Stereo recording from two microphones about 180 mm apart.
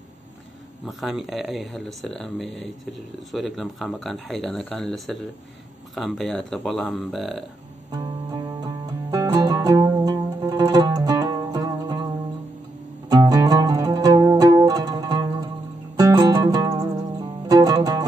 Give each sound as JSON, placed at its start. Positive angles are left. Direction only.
{"t": 0.8, "sound": "speech", "side_deg": 0}
{"t": 7.9, "sound": "music", "side_deg": -15}
{"t": 13.1, "sound": "music", "side_deg": -20}